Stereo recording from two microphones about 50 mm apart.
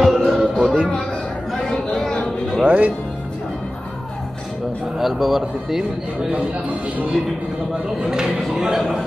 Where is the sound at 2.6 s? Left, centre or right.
Right.